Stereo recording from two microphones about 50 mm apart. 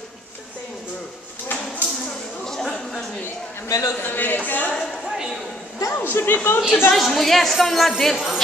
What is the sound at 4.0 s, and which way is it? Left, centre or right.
Speech, left.